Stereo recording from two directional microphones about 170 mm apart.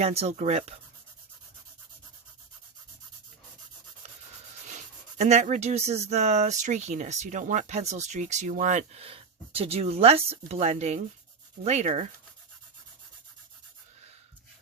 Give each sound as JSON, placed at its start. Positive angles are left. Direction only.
{"t": 0.0, "sound": "speech", "side_deg": -40}
{"t": 4.7, "sound": "speech", "side_deg": -45}